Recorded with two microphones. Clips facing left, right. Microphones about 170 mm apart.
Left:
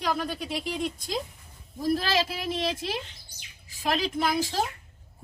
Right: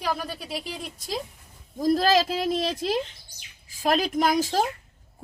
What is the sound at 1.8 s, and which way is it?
A woman's voice, 40° right (ahead or behind).